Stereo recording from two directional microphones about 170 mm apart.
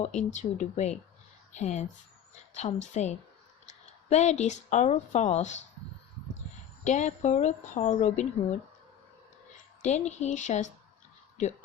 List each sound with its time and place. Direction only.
0.0 s a woman's voice: 45° left (ahead or behind)
6.8 s a woman's voice: 45° left (ahead or behind)
9.8 s a woman's voice: 40° left (ahead or behind)